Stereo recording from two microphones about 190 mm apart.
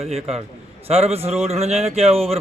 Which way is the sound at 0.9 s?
35° right (ahead or behind).